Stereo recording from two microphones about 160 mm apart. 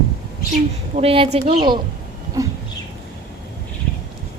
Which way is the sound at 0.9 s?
35° right (ahead or behind).